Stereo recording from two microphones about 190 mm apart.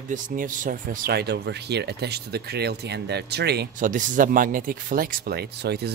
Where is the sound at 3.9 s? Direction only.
45° right (ahead or behind).